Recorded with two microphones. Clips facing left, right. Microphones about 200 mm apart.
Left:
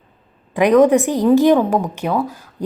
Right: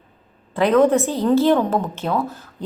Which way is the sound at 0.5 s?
15° left (ahead or behind).